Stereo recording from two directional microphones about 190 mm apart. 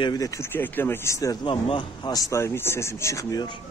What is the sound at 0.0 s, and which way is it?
Speech, 20° left (ahead or behind).